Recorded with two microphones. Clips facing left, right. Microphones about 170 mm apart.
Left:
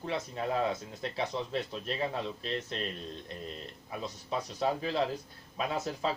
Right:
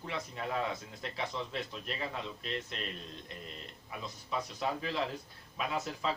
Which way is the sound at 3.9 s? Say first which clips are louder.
Left 3 dB; 30° left (ahead or behind).